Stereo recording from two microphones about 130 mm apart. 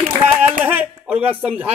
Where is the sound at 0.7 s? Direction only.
10° right (ahead or behind).